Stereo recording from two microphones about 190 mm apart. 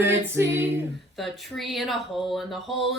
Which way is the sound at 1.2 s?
Centre (ahead or behind).